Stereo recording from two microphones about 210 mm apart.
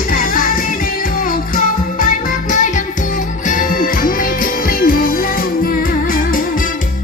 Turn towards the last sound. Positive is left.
turn(degrees=45)  # may be behind; listen again after turning